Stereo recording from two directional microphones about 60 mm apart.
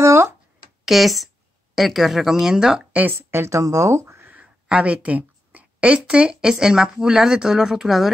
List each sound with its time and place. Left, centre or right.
0.0 s a sound: right
0.8 s a woman's voice: centre
2.9 s speech: right
3.2 s speech: right
3.5 s speech: right
4.3 s a sound: right
6.5 s a woman's voice: centre